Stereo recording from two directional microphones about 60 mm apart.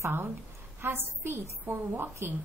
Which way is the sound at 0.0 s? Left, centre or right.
Right.